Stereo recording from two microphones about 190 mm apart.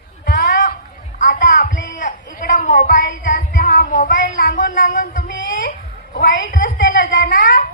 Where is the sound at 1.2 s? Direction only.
45° left (ahead or behind).